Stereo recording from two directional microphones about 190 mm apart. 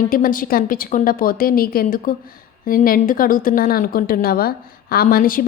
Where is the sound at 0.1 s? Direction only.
45° left (ahead or behind).